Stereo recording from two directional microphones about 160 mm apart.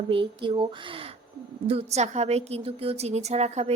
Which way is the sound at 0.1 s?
30° right (ahead or behind).